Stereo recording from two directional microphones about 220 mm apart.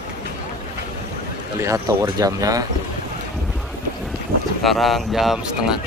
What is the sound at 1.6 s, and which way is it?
Speech, 15° right (ahead or behind).